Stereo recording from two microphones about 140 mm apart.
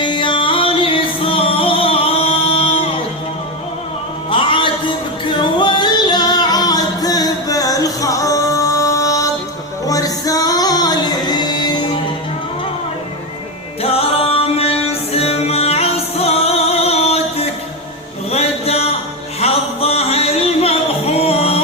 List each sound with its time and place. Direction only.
0.0 s music: 35° left (ahead or behind)
4.3 s music: 40° left (ahead or behind)
13.8 s music: 45° left (ahead or behind)